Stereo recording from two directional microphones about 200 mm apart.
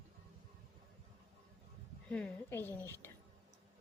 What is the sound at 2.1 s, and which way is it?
Speech, 5° left (ahead or behind).